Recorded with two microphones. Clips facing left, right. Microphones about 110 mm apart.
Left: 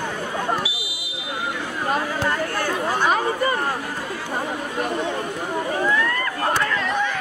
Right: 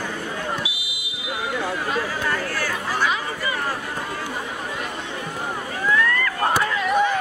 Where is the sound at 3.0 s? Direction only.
45° left (ahead or behind).